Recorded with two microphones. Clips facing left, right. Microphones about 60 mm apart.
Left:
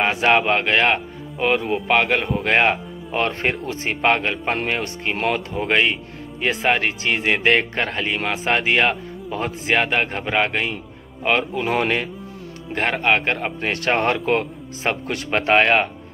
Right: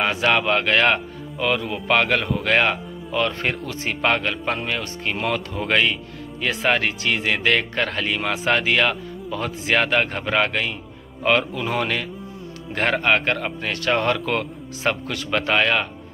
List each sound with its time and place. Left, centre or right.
0.2 s speech: left
2.4 s speech: left
12.7 s a man's voice: centre; by 15.9 s left